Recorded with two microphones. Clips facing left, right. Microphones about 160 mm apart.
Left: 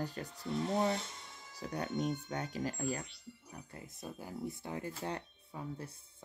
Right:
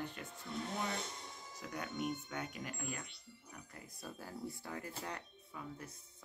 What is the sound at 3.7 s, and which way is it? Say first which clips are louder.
Speech: left 4 dB; 20° left (ahead or behind).